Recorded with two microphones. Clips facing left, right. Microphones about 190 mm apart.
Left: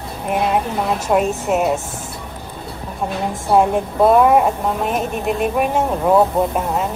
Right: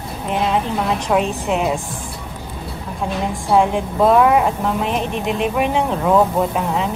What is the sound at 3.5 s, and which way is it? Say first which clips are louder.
A woman's voice: left 1 dB; centre (ahead or behind).